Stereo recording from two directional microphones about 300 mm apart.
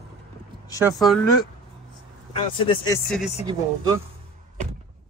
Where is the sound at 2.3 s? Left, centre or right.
Centre.